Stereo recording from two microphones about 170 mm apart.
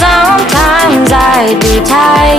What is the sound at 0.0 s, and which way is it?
Music, centre (ahead or behind).